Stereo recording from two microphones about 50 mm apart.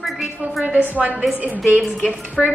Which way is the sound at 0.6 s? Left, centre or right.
Right.